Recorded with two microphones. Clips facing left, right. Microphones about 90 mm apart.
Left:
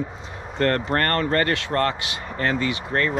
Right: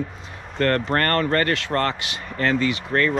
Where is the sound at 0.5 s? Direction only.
30° left (ahead or behind).